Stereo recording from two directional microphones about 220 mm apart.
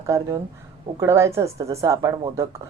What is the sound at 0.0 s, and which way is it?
A woman's voice, 15° right (ahead or behind).